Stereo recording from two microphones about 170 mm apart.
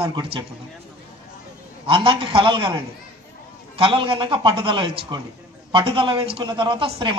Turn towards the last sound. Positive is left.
turn(degrees=-30)  # may be behind; listen again after turning